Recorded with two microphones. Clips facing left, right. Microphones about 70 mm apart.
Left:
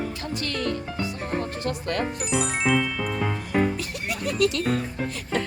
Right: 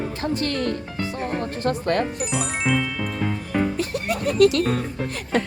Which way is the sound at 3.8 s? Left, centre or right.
Right.